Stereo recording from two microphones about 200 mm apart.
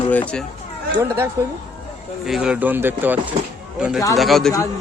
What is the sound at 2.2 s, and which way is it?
Speech, 5° right (ahead or behind).